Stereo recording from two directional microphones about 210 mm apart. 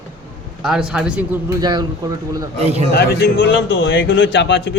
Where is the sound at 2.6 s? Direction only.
30° right (ahead or behind).